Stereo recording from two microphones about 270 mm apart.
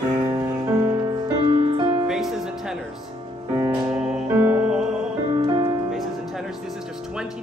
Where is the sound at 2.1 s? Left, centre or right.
Centre.